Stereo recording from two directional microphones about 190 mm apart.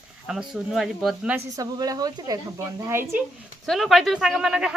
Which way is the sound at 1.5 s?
20° right (ahead or behind).